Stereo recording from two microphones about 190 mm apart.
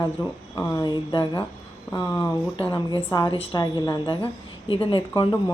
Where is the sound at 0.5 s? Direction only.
20° left (ahead or behind).